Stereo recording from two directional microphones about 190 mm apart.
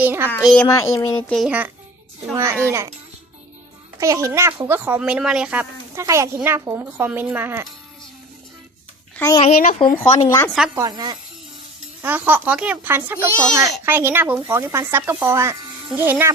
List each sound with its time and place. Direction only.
0.0 s a child's voice: 10° right (ahead or behind)
0.4 s speech: 5° left (ahead or behind)
1.3 s speech: 5° right (ahead or behind)
4.0 s speech: 15° right (ahead or behind)
9.1 s a child's voice: 15° left (ahead or behind)
9.4 s speech: 40° left (ahead or behind)
10.2 s speech: 15° left (ahead or behind)
10.8 s speech: 20° right (ahead or behind)
12.0 s speech: 10° right (ahead or behind)